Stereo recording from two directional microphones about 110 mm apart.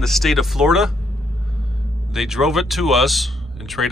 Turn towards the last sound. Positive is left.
turn(degrees=0)  # may be behind; listen again after turning